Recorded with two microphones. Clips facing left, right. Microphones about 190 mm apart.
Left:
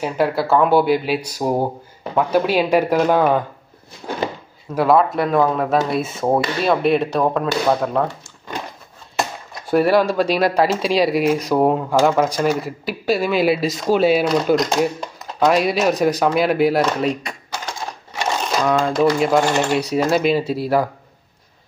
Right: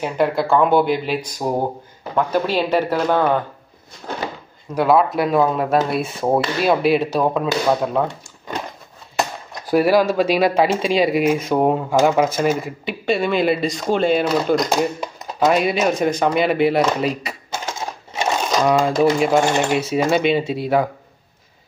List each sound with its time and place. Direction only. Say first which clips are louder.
0.0 s speech: even; 5° left (ahead or behind)
4.7 s speech: even; centre (ahead or behind)
9.5 s speech: even; centre (ahead or behind)
17.5 s sewing machine: right 2 dB; 20° right (ahead or behind)
18.6 s speech: right 1 dB; 10° right (ahead or behind)